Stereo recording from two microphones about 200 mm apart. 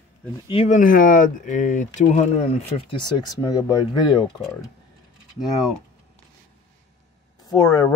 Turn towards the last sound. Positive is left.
turn(degrees=20)  # may be behind; listen again after turning